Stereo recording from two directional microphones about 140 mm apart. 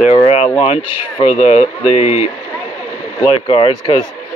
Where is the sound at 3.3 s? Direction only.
40° left (ahead or behind).